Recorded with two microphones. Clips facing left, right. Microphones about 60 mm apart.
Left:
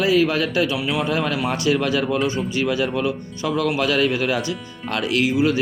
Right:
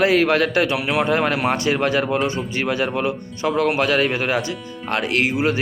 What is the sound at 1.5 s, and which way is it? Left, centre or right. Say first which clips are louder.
A man's voice: right 1 dB; right.